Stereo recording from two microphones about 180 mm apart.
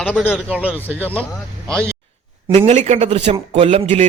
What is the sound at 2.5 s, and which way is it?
A man's voice, 35° right (ahead or behind).